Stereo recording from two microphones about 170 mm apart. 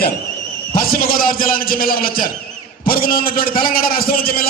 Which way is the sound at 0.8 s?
60° left (ahead or behind).